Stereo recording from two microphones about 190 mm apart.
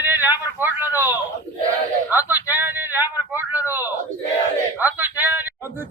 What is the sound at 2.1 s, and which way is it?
Speech, 10° right (ahead or behind).